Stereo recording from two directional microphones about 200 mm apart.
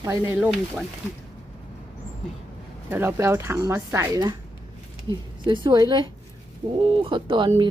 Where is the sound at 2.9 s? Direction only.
10° right (ahead or behind).